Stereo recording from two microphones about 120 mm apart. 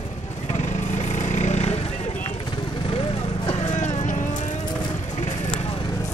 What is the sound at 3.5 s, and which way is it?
Vehicle, 65° left (ahead or behind).